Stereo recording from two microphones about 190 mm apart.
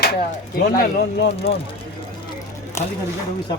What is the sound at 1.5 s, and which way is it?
Speech, 30° left (ahead or behind).